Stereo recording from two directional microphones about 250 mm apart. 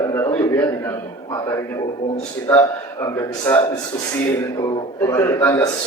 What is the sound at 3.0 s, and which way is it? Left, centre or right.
Speech, centre.